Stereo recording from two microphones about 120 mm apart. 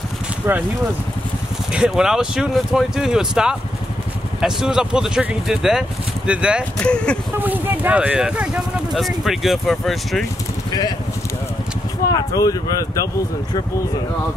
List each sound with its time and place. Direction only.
0.4 s speech: 20° right (ahead or behind)
1.7 s speech: 5° right (ahead or behind)
6.8 s speech: 10° left (ahead or behind)
7.3 s speech: 15° right (ahead or behind); by 10.2 s centre (ahead or behind)
12.1 s speech: 30° left (ahead or behind)